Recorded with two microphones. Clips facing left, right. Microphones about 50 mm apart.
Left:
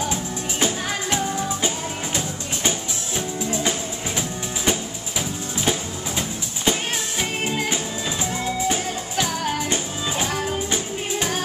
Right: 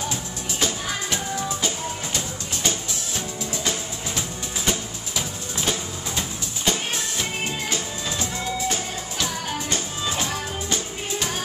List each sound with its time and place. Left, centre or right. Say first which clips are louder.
0.1 s music: left 4 dB; left
3.2 s music: left 7 dB; left
5.6 s music: left 2 dB; centre